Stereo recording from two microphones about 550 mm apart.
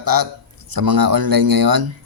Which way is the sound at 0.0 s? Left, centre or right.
Right.